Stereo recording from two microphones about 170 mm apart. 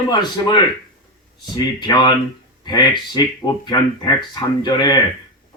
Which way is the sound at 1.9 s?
25° left (ahead or behind).